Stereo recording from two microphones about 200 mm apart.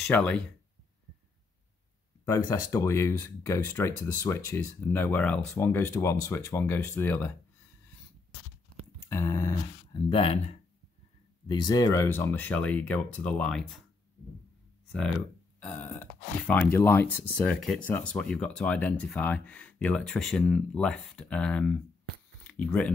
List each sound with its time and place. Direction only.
0.0 s speech: 5° left (ahead or behind)
2.2 s speech: 15° left (ahead or behind)
9.1 s speech: 15° left (ahead or behind)
10.0 s speech: 25° left (ahead or behind)
11.4 s speech: 20° left (ahead or behind); by 13.8 s centre (ahead or behind)
14.9 s speech: 5° left (ahead or behind)